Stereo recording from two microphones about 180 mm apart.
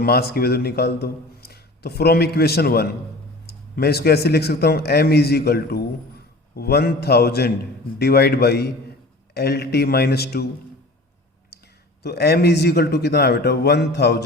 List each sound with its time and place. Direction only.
0.0 s speech: 60° left (ahead or behind)
11.5 s a sound: 65° left (ahead or behind)
12.0 s speech: 65° left (ahead or behind)